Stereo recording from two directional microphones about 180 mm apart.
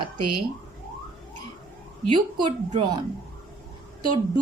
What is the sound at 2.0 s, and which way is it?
Speech, 30° right (ahead or behind).